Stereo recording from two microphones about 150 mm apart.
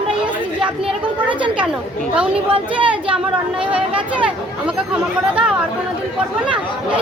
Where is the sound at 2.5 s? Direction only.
35° right (ahead or behind).